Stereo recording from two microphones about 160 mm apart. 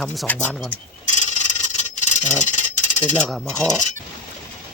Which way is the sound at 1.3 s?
50° left (ahead or behind).